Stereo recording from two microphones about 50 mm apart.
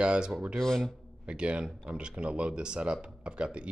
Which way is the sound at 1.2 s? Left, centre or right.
Right.